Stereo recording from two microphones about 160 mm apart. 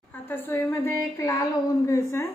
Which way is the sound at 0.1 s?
10° left (ahead or behind).